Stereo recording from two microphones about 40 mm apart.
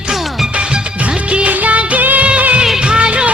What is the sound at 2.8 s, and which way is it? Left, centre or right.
Music, right.